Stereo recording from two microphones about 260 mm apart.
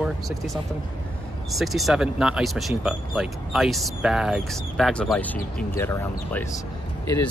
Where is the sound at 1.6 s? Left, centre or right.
Centre.